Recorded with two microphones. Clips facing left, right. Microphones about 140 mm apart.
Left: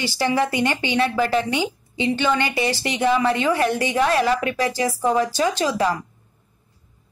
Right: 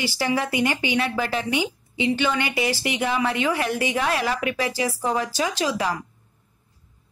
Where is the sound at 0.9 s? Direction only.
30° left (ahead or behind).